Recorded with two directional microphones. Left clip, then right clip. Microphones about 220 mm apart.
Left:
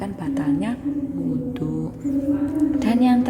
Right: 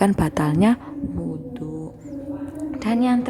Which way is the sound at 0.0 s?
30° right (ahead or behind).